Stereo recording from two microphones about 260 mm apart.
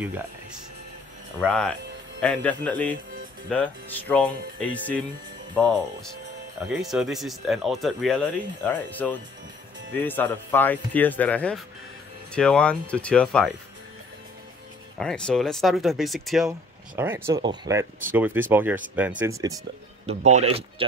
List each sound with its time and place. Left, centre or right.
1.4 s speech: centre
6.8 s speech: centre
15.0 s speech: centre
20.1 s speech: right